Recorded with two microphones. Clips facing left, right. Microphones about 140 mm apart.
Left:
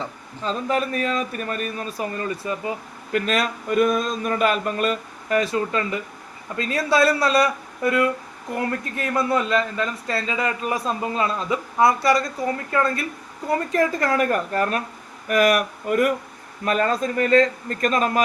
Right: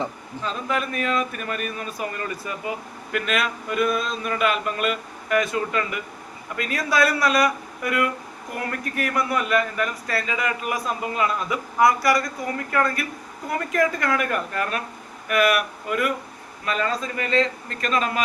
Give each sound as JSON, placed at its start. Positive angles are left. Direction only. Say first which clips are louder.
{"t": 0.4, "sound": "a man's voice", "louder": "left 3 dB", "side_deg": 35}